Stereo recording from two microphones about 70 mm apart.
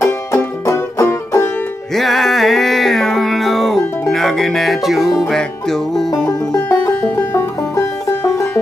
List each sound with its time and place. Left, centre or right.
0.0 s music: left
2.0 s music: centre
6.2 s music: left
7.0 s music: left